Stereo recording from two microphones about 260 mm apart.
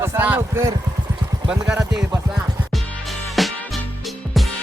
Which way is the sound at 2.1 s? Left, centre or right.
Centre.